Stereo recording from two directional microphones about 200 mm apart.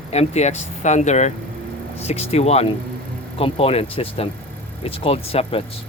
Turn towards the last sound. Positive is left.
turn(degrees=30)  # may be behind; listen again after turning